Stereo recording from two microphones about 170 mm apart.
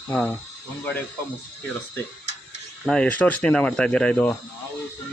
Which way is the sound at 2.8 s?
5° left (ahead or behind).